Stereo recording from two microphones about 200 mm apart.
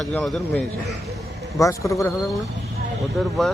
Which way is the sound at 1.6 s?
15° left (ahead or behind).